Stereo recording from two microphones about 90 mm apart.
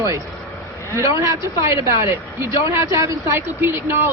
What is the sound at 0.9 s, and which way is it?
Speech, 35° right (ahead or behind).